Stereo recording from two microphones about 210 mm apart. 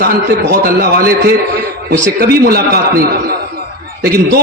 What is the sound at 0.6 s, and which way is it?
A man's voice, 50° right (ahead or behind).